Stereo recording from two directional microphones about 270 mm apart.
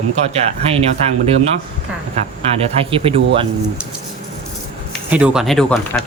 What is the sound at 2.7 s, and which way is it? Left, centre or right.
Speech, centre.